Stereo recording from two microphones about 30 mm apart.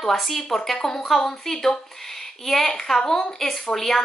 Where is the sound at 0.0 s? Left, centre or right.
Centre; by 3.3 s left.